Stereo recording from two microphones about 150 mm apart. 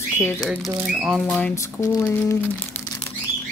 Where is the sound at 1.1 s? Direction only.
Centre (ahead or behind).